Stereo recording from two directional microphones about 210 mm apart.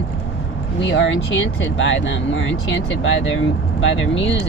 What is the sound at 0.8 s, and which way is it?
Speech, 60° left (ahead or behind).